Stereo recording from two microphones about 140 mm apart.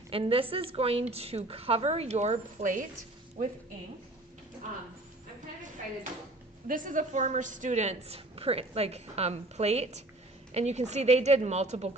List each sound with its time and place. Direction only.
0.1 s a woman's voice: 40° right (ahead or behind); by 3.5 s 70° right (ahead or behind)
6.7 s a woman's voice: 75° right (ahead or behind); by 11.9 s 50° right (ahead or behind)